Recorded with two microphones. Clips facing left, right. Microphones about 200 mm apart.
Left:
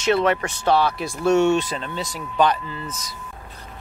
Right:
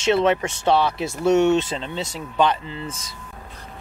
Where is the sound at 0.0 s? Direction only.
20° right (ahead or behind).